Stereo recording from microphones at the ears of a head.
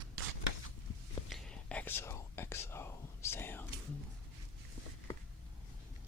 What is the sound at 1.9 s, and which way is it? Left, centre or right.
Whispering, left.